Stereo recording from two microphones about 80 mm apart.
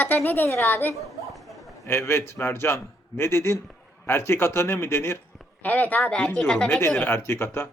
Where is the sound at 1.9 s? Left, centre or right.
Left.